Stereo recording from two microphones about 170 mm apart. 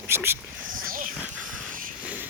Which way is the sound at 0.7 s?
55° right (ahead or behind).